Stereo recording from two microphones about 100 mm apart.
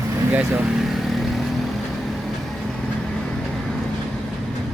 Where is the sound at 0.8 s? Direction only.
Centre (ahead or behind).